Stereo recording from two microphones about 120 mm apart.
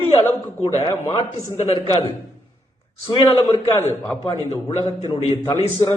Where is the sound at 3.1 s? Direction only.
40° left (ahead or behind).